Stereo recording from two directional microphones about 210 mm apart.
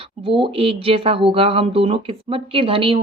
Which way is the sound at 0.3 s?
25° right (ahead or behind).